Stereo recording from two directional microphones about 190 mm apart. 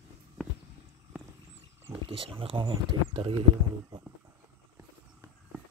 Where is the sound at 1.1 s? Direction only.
10° right (ahead or behind).